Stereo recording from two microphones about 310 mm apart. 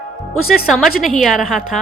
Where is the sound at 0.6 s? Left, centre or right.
Centre.